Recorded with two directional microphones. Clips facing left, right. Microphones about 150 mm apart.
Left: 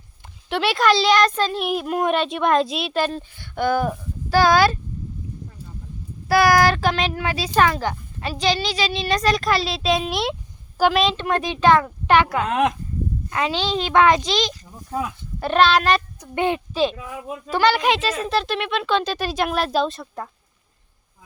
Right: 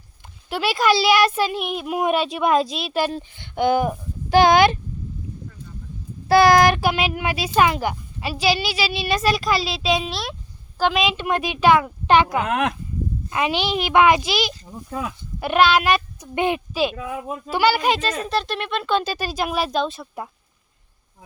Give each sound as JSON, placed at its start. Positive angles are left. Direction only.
{"t": 0.5, "sound": "a child's voice", "side_deg": -5}
{"t": 2.9, "sound": "speech", "side_deg": -10}
{"t": 6.2, "sound": "speech", "side_deg": -25}
{"t": 10.1, "sound": "speech", "side_deg": 20}
{"t": 10.8, "sound": "a woman's voice", "side_deg": 5}
{"t": 11.1, "sound": "speech", "side_deg": -10}
{"t": 12.5, "sound": "speech", "side_deg": -60}
{"t": 13.3, "sound": "a child's voice", "side_deg": -15}